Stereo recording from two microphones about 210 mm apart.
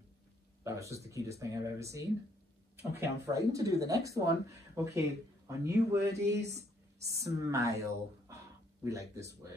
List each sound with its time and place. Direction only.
0.7 s speech: 15° right (ahead or behind)